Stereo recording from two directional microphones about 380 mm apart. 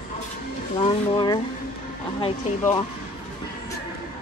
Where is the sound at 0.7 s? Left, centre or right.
Centre.